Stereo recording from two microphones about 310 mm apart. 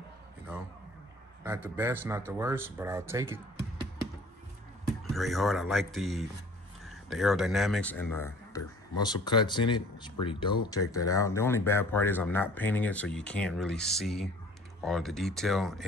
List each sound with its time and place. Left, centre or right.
1.4 s speech: centre
5.1 s speech: centre